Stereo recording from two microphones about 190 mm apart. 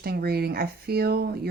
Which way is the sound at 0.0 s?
55° right (ahead or behind).